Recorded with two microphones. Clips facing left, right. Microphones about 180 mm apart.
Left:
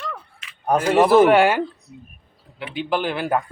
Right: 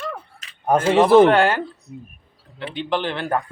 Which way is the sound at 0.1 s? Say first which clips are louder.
Right 2 dB; 40° right (ahead or behind).